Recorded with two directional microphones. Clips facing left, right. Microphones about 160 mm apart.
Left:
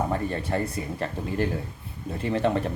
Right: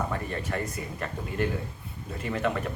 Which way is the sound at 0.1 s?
30° left (ahead or behind).